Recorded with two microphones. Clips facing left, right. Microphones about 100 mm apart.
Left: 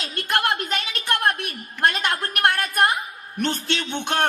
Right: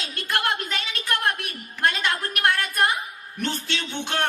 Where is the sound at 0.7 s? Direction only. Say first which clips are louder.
Left 3 dB; 20° left (ahead or behind).